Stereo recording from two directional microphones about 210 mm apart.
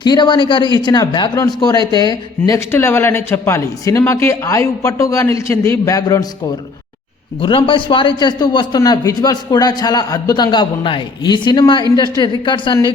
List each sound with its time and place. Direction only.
0.0 s a man's voice: 20° left (ahead or behind)
7.4 s a man's voice: 25° left (ahead or behind)